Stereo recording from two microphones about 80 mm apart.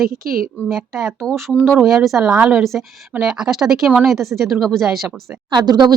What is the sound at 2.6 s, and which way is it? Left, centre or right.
Speech, centre.